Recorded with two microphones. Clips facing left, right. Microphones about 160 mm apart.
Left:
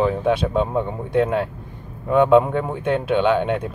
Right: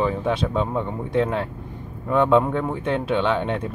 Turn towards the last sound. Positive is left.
turn(degrees=5)  # may be behind; listen again after turning